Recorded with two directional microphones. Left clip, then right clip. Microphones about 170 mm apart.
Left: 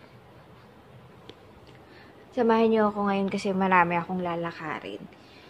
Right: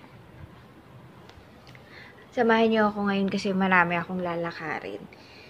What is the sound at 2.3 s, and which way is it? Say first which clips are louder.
A woman's voice: even; 20° left (ahead or behind).